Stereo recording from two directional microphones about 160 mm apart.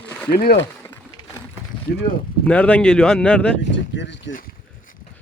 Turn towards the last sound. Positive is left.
turn(degrees=90)